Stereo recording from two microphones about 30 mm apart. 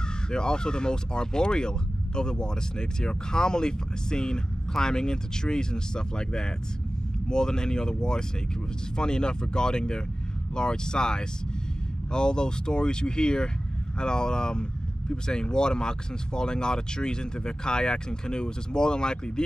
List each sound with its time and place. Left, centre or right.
0.3 s speech: left